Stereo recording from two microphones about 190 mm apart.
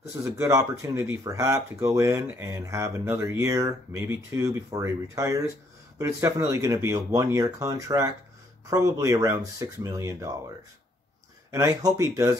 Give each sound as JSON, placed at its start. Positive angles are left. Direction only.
{"t": 0.1, "sound": "speech", "side_deg": -15}
{"t": 11.5, "sound": "speech", "side_deg": -15}